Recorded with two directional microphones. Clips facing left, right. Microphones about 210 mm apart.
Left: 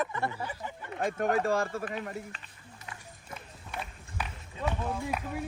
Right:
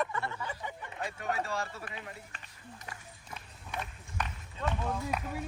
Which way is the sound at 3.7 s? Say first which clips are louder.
Even; 10° left (ahead or behind).